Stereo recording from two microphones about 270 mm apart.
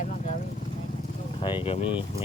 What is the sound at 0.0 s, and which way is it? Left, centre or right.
Vehicle, left.